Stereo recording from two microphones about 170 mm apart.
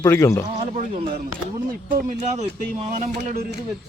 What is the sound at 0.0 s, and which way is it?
Speech, 20° left (ahead or behind).